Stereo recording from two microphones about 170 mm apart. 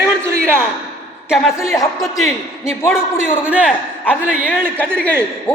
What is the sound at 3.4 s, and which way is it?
Speech, 5° right (ahead or behind).